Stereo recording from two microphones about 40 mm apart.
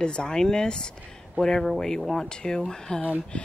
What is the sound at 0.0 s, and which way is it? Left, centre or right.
Speech, left.